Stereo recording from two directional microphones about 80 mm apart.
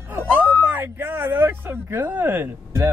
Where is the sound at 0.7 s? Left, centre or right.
Right.